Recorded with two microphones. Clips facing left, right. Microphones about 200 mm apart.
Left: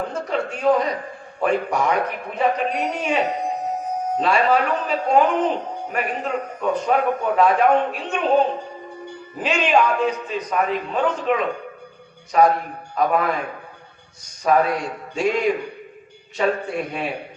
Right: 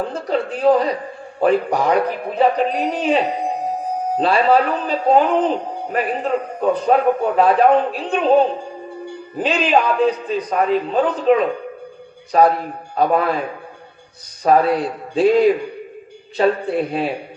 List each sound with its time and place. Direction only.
0.1 s a man's voice: 35° right (ahead or behind)
9.4 s a man's voice: 35° right (ahead or behind)
14.4 s a man's voice: 35° right (ahead or behind)